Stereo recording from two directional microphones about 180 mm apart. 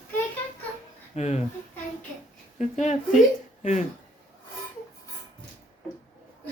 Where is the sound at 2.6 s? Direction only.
40° left (ahead or behind).